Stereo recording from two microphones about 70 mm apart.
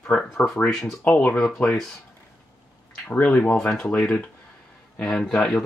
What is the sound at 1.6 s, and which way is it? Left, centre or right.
Speech, centre.